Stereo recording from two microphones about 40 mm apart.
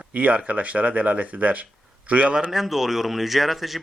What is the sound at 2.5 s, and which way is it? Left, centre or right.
Speech, centre.